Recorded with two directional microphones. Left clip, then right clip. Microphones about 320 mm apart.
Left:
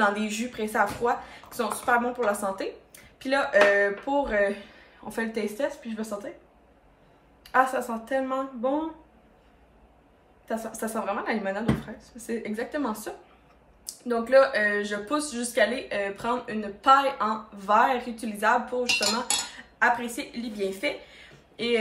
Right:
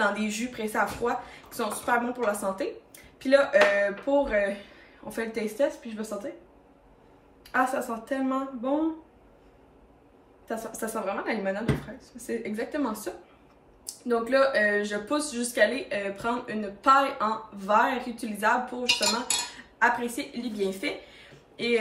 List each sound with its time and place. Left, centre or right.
0.0 s speech: centre
7.5 s speech: centre
10.5 s a woman's voice: centre